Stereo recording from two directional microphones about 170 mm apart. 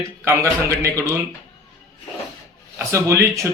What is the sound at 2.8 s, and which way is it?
Mantra, 15° right (ahead or behind).